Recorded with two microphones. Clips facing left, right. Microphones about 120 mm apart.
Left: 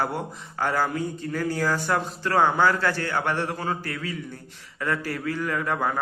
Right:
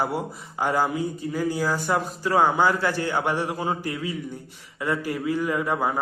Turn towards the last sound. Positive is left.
turn(degrees=-10)  # may be behind; listen again after turning